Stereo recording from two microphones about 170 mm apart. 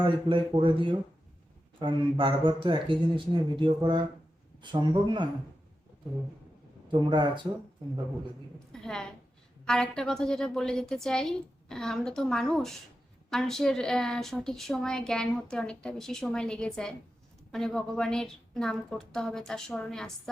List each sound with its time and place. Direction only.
0.0 s speech: 30° right (ahead or behind)
7.0 s speech: 25° right (ahead or behind)
8.5 s a sound: 5° left (ahead or behind)
9.6 s a woman's voice: 5° left (ahead or behind)